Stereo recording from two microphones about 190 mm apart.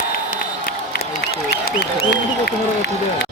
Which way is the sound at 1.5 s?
55° left (ahead or behind).